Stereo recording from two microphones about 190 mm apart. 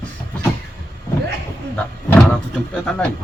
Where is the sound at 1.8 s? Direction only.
5° left (ahead or behind).